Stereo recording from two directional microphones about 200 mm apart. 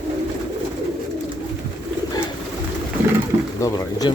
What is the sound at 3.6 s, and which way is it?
Speech, 20° left (ahead or behind).